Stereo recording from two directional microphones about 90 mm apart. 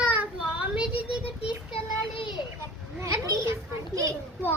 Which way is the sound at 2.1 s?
65° left (ahead or behind).